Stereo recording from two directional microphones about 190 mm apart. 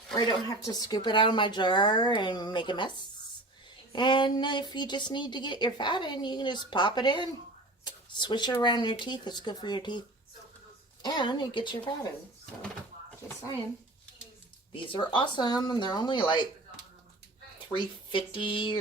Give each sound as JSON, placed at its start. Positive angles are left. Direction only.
{"t": 0.2, "sound": "a woman's voice", "side_deg": 20}
{"t": 3.9, "sound": "a woman's voice", "side_deg": 25}
{"t": 11.0, "sound": "a woman's voice", "side_deg": 25}
{"t": 14.7, "sound": "a woman's voice", "side_deg": 25}
{"t": 17.7, "sound": "a woman's voice", "side_deg": 25}